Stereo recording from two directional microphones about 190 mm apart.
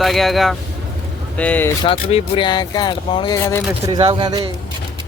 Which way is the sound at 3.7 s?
15° right (ahead or behind).